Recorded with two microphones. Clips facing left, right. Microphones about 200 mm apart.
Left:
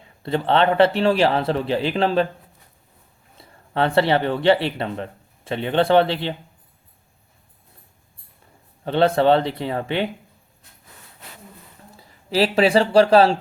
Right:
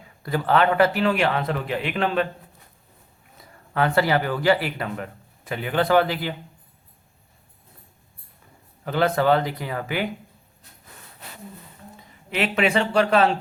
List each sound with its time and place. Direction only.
0.0 s a man's voice: 25° left (ahead or behind)
3.3 s speech: 30° left (ahead or behind)
8.8 s speech: 30° left (ahead or behind)
11.9 s speech: 35° left (ahead or behind)